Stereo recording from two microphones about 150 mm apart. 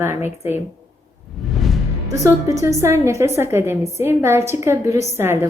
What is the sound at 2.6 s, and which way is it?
A woman's voice, 20° right (ahead or behind).